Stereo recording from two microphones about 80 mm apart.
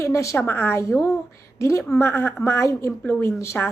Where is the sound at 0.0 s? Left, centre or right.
Left.